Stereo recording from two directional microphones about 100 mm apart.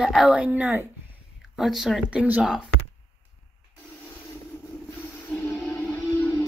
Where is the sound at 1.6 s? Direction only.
Centre (ahead or behind).